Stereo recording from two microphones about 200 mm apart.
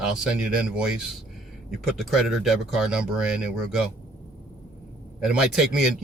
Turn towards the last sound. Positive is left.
turn(degrees=-5)  # may be behind; listen again after turning